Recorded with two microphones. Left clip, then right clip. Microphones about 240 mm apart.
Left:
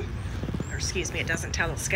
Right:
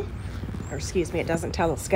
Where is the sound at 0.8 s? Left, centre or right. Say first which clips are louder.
Right 4 dB; right.